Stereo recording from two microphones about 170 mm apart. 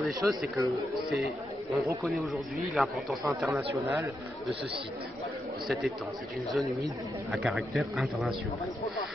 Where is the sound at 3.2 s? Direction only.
10° right (ahead or behind).